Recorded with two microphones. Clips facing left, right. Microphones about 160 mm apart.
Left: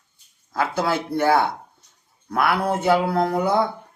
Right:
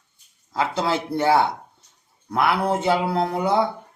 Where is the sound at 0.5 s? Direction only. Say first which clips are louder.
Even; 25° right (ahead or behind).